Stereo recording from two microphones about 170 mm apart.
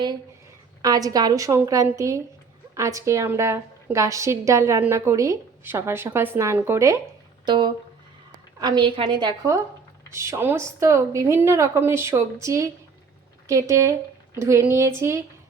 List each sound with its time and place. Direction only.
0.8 s a woman's voice: 20° right (ahead or behind)